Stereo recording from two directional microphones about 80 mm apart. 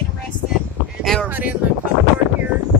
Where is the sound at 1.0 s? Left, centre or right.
Centre.